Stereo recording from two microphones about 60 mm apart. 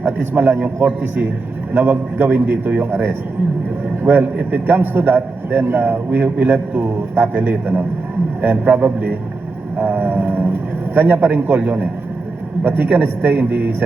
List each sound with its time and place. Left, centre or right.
0.0 s a man's voice: right
1.7 s a man's voice: right